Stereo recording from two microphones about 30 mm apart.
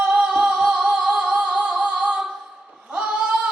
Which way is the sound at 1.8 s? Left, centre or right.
Right.